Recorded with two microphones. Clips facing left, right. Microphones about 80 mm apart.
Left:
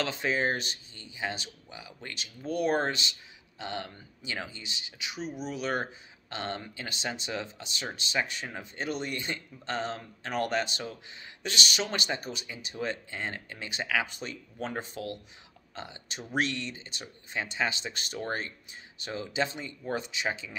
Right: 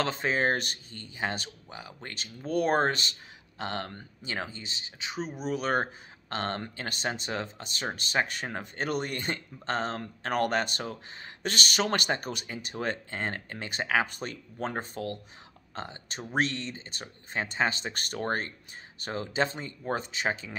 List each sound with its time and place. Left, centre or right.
0.0 s speech: right